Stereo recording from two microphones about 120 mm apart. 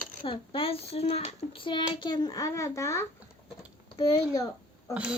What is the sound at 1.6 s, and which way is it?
A child's voice, 45° left (ahead or behind).